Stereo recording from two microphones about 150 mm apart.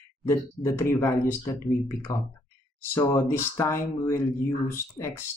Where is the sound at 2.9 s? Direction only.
20° left (ahead or behind).